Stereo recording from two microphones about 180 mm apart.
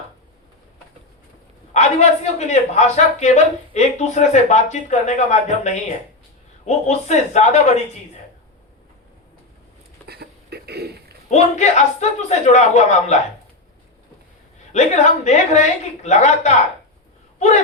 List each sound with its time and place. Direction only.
1.7 s a man's voice: 40° left (ahead or behind)
10.1 s a sound: 65° right (ahead or behind)
11.3 s a man's voice: 40° left (ahead or behind)
14.7 s a man's voice: 40° left (ahead or behind)